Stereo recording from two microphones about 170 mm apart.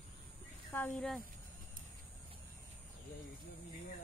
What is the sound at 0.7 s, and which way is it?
Speech, 10° left (ahead or behind).